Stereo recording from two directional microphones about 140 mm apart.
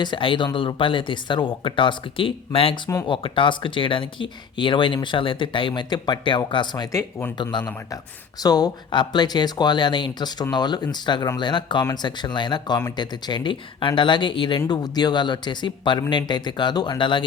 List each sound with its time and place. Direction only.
0.0 s speech: 35° left (ahead or behind)
6.9 s speech: 15° left (ahead or behind)
7.5 s speech: 35° left (ahead or behind)